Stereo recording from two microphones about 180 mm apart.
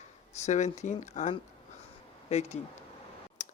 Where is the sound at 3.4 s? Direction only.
40° left (ahead or behind).